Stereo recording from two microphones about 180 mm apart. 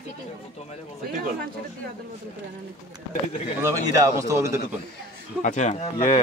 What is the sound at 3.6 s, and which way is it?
Speech, 15° right (ahead or behind).